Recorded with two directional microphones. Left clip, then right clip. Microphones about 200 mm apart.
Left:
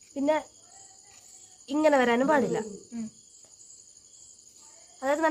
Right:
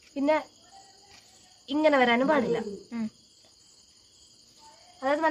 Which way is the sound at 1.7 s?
40° left (ahead or behind).